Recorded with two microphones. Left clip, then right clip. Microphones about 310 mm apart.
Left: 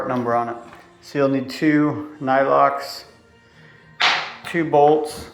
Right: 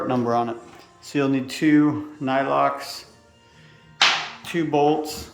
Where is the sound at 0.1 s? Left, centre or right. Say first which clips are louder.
Left 1 dB; centre.